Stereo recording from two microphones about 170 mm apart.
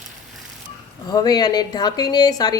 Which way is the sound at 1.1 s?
25° left (ahead or behind).